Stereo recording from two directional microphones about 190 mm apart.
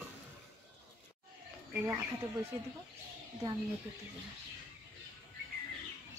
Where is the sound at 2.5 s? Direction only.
20° right (ahead or behind).